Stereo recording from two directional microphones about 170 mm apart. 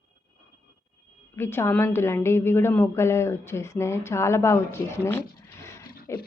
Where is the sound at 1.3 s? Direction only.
15° left (ahead or behind).